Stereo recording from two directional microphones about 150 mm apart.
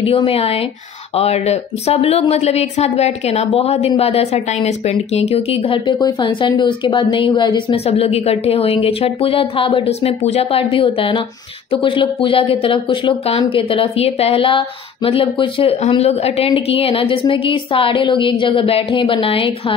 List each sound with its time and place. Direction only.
0.0 s speech: 40° left (ahead or behind)